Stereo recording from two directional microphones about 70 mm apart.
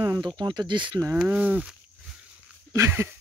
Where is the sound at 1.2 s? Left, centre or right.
Right.